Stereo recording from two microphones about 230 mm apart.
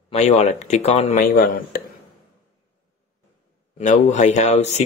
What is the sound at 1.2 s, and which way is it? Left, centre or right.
Speech, left.